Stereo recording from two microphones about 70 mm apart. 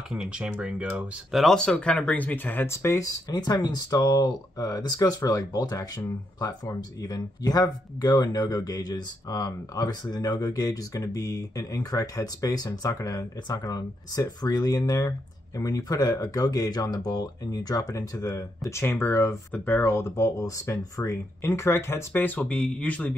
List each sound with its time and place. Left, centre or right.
0.1 s speech: centre
0.9 s speech: centre; by 2.7 s left
2.7 s speech: left
3.0 s speech: left
22.1 s speech: left